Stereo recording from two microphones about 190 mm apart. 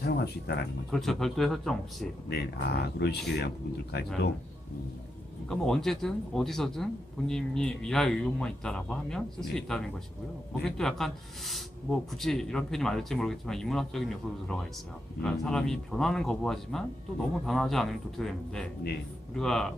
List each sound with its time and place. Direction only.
0.0 s speech: 55° left (ahead or behind)
0.9 s speech: centre (ahead or behind)
2.2 s speech: 60° left (ahead or behind)
5.5 s speech: centre (ahead or behind)